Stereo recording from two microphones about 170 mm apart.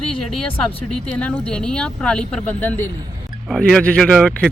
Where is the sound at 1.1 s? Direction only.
10° left (ahead or behind).